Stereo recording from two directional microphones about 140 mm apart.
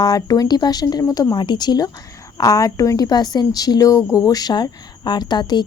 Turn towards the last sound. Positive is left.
turn(degrees=30)  # may be behind; listen again after turning